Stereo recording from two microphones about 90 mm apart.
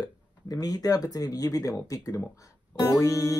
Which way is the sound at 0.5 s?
45° left (ahead or behind).